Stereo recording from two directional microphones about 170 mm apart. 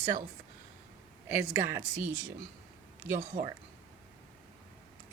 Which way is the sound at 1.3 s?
15° right (ahead or behind).